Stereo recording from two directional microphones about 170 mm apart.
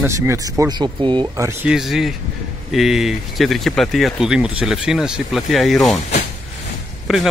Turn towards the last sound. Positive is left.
turn(degrees=-5)  # may be behind; listen again after turning